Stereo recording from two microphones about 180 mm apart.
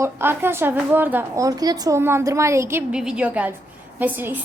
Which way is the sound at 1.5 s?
20° right (ahead or behind).